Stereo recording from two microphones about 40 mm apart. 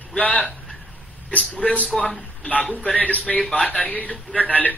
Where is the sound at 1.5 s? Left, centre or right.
Left.